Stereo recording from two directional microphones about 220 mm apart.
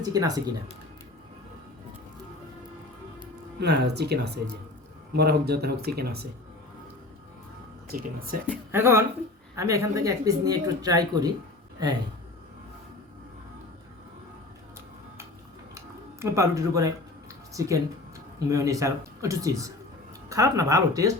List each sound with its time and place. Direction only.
0.0 s speech: 15° right (ahead or behind)
3.6 s speech: 50° right (ahead or behind)
7.9 s speech: 40° right (ahead or behind)
8.7 s speech: 10° right (ahead or behind)
16.2 s speech: 15° right (ahead or behind)